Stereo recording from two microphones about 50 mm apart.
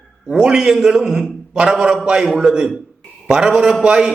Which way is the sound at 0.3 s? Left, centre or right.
Centre.